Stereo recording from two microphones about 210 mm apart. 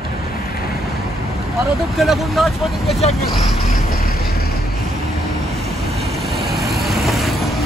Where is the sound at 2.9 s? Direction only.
30° left (ahead or behind).